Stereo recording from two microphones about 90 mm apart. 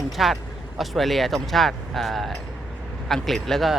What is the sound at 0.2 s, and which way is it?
Speech, 5° right (ahead or behind).